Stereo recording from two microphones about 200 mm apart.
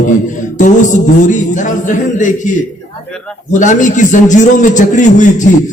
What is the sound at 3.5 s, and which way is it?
A man's voice, 40° left (ahead or behind).